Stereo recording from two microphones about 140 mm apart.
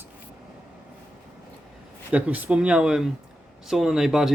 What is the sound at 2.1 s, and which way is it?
Speech, 10° right (ahead or behind).